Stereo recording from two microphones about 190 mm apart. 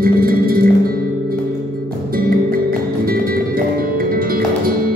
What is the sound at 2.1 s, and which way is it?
Music, 50° right (ahead or behind).